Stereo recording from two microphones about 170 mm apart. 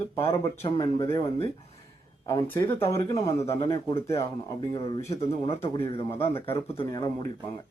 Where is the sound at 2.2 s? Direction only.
15° left (ahead or behind).